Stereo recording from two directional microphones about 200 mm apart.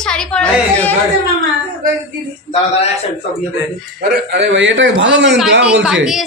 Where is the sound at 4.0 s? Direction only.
60° right (ahead or behind).